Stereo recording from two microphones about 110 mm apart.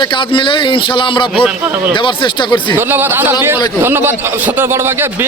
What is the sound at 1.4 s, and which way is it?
Speech, 15° right (ahead or behind).